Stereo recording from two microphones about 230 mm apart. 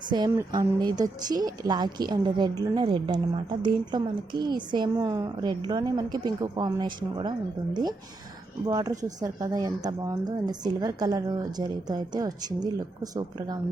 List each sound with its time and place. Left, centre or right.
0.1 s a woman's voice: centre